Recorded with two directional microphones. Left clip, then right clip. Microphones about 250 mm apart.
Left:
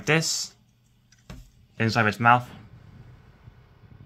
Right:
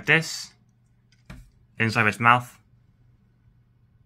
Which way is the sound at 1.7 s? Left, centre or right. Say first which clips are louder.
Right 1 dB; left.